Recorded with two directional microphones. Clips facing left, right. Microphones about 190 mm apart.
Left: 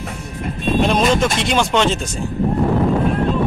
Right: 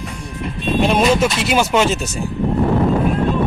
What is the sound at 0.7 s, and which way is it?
Speech, 5° right (ahead or behind).